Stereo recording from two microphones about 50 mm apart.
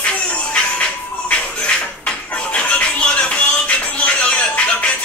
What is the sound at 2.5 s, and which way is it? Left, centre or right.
Music, left.